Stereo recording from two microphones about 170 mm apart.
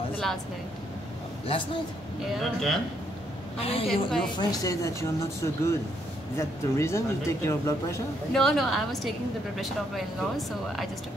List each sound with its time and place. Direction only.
2.3 s speech: centre (ahead or behind)
3.5 s a woman's voice: 35° left (ahead or behind)
4.4 s speech: 20° left (ahead or behind)
8.3 s speech: centre (ahead or behind)